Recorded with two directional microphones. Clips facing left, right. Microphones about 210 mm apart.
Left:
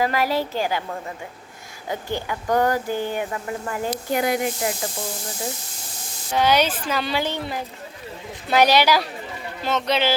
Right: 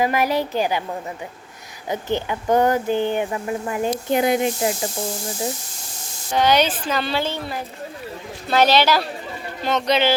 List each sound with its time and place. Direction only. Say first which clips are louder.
0.0 s a woman's voice: right 2 dB; 20° right (ahead or behind)
1.9 s speech: right 4 dB; 20° right (ahead or behind)
6.3 s a woman's voice: right 1 dB; 5° left (ahead or behind)